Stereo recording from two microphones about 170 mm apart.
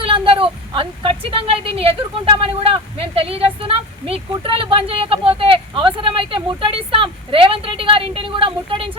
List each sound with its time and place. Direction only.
0.0 s a woman's voice: 30° right (ahead or behind)